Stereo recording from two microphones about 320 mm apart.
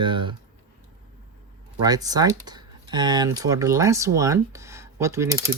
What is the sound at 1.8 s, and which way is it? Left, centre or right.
Speech, centre.